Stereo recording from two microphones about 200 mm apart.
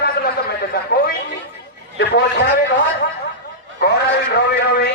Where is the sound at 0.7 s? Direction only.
50° left (ahead or behind).